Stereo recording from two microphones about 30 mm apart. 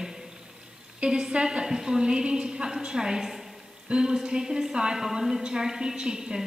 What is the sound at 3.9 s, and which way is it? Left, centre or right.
A woman's voice, right.